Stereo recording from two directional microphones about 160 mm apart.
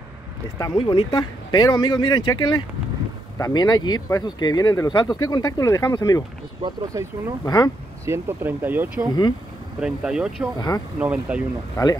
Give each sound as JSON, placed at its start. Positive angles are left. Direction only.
{"t": 0.6, "sound": "speech", "side_deg": 25}
{"t": 6.6, "sound": "speech", "side_deg": -20}
{"t": 7.4, "sound": "speech", "side_deg": 25}
{"t": 8.0, "sound": "speech", "side_deg": -15}
{"t": 11.7, "sound": "speech", "side_deg": 20}